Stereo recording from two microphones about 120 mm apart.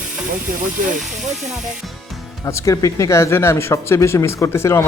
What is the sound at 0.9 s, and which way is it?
Speech, 90° right.